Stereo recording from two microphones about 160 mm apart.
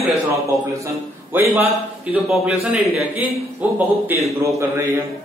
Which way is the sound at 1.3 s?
10° right (ahead or behind).